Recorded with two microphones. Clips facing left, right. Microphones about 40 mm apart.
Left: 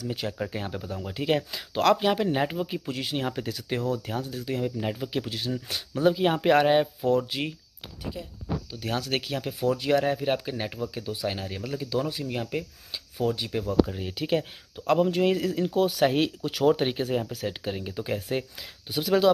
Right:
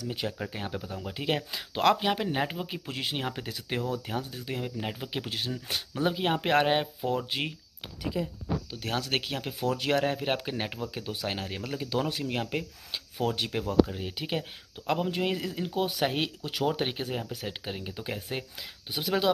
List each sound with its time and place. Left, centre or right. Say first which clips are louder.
0.0 s speech: left 2 dB; centre
2.9 s speech: left 3 dB; right
7.2 s speech: left 1 dB; right
8.7 s speech: left 3 dB; right
13.5 s speech: left 2 dB; right
13.8 s speech: left 5 dB; centre